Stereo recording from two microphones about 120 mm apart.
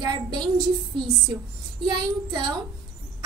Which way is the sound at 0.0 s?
40° right (ahead or behind).